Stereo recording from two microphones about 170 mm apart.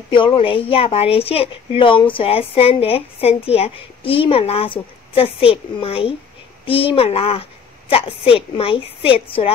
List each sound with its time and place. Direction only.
0.1 s speech: 30° left (ahead or behind)